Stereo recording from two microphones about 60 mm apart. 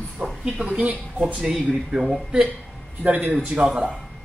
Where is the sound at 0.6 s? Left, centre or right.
Centre.